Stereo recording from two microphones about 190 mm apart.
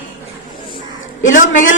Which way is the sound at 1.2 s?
40° left (ahead or behind).